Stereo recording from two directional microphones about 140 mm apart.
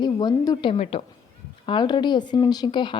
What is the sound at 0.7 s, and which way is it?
Speech, 45° left (ahead or behind).